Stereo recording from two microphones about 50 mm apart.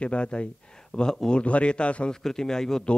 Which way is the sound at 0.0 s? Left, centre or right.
Left.